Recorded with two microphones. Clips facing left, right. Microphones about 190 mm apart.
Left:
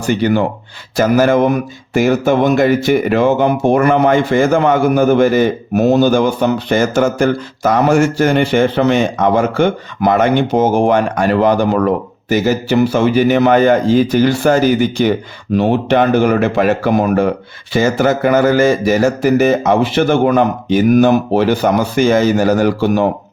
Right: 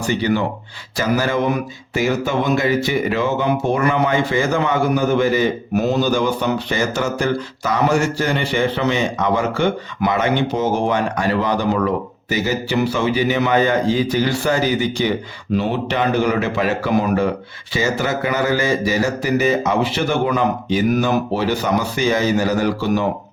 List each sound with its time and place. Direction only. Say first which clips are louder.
0.9 s speech: left 8 dB; 50° left (ahead or behind)